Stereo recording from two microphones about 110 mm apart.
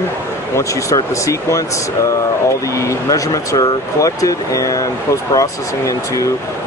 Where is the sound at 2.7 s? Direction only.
30° left (ahead or behind).